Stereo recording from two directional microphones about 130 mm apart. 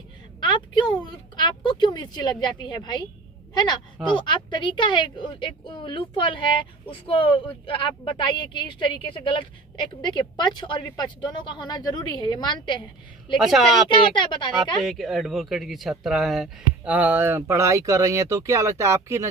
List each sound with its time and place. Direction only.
0.3 s a woman's voice: 35° left (ahead or behind)
13.4 s speech: centre (ahead or behind)
13.8 s speech: 40° left (ahead or behind)
14.5 s speech: centre (ahead or behind); by 19.3 s 20° right (ahead or behind)